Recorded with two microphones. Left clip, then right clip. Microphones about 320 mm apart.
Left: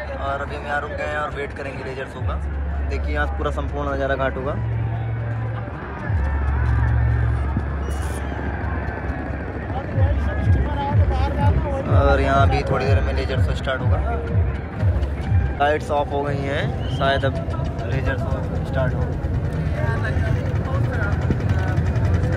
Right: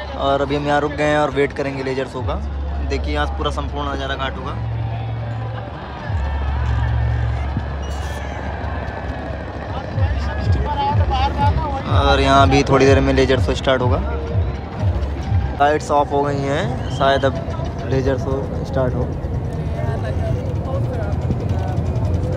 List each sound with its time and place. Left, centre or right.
0.2 s speech: centre
10.8 s speech: centre
15.6 s speech: centre
21.3 s vehicle: centre